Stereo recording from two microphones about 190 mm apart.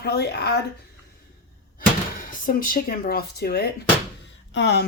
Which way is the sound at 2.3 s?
45° left (ahead or behind).